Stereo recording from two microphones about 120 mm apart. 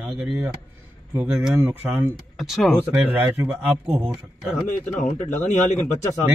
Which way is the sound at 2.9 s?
15° right (ahead or behind).